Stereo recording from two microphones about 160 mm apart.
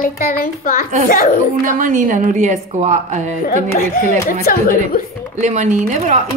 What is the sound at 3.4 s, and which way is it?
A child's voice, 65° left (ahead or behind).